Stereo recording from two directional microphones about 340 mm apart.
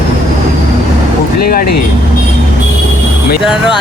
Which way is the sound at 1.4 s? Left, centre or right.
Left.